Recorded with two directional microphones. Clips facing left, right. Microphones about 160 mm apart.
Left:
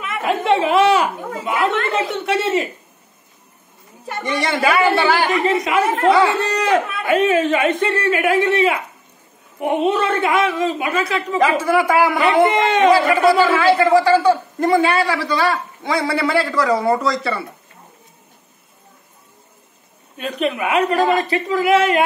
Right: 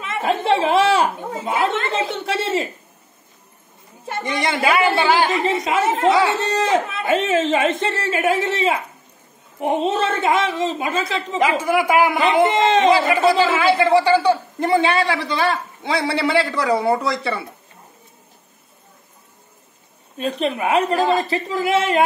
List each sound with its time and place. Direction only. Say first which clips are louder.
0.0 s a woman's voice: even; 30° right (ahead or behind)
4.1 s a woman's voice: left 1 dB; 20° right (ahead or behind)
11.6 s a woman's voice: left 1 dB; 15° right (ahead or behind)
20.2 s a woman's voice: even; 30° right (ahead or behind)